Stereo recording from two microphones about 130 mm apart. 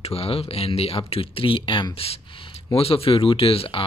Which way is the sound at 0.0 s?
50° left (ahead or behind).